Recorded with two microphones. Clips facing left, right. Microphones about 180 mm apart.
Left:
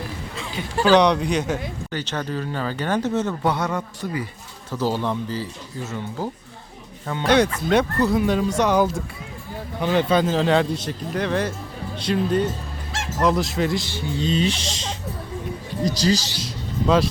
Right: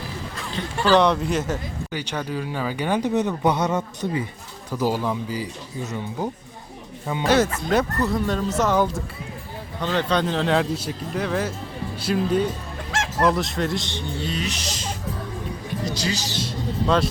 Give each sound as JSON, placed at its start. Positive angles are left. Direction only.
{"t": 0.9, "sound": "a man's voice", "side_deg": 0}
{"t": 4.7, "sound": "a man's voice", "side_deg": -10}
{"t": 8.4, "sound": "speech", "side_deg": -5}
{"t": 9.8, "sound": "a man's voice", "side_deg": 10}
{"t": 14.2, "sound": "speech", "side_deg": 25}
{"t": 16.0, "sound": "a man's voice", "side_deg": 40}
{"t": 16.4, "sound": "music", "side_deg": 0}